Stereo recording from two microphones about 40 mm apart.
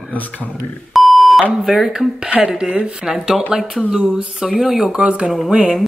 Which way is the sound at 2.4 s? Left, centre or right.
Right.